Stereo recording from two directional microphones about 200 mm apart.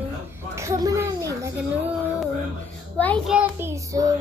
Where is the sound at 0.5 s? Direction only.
15° right (ahead or behind).